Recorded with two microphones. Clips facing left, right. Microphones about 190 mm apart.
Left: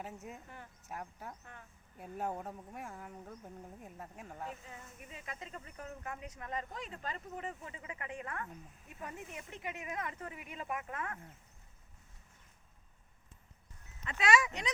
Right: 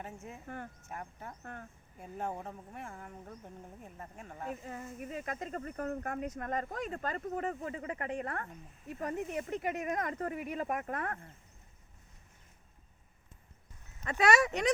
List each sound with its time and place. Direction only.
0.4 s speech: 55° right (ahead or behind)
0.9 s speech: 5° left (ahead or behind)
1.4 s speech: 50° right (ahead or behind)
2.0 s speech: 5° left (ahead or behind)
4.6 s speech: 50° right (ahead or behind)
14.0 s speech: 45° right (ahead or behind)
14.3 s speech: 65° right (ahead or behind)